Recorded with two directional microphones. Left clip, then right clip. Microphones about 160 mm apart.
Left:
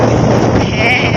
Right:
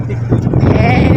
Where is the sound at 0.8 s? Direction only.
15° right (ahead or behind).